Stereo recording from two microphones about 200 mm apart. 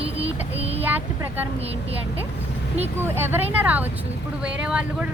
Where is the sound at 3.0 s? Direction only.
10° right (ahead or behind).